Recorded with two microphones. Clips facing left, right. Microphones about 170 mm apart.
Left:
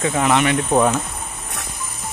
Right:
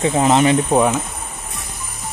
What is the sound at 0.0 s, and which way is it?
Speech, 30° right (ahead or behind).